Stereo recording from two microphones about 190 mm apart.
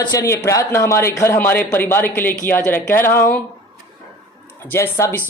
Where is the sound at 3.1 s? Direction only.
50° left (ahead or behind).